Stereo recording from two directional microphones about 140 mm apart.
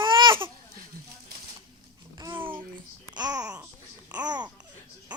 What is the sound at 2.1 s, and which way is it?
Babbling, 35° right (ahead or behind).